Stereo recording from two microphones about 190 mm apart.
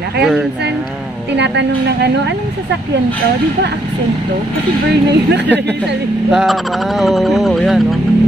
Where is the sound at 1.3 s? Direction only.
65° right (ahead or behind).